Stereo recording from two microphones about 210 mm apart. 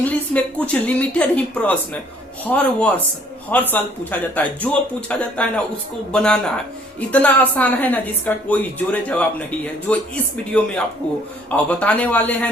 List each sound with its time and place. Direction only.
0.0 s a woman's voice: 5° left (ahead or behind)
11.5 s a woman's voice: 5° left (ahead or behind)